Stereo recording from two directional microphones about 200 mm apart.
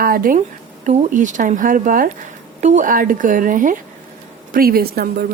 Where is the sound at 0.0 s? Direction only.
45° right (ahead or behind).